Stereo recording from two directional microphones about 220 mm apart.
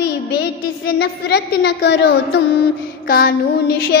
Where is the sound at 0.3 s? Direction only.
50° left (ahead or behind).